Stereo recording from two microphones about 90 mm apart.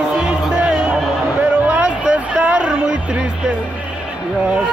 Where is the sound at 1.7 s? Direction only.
15° right (ahead or behind).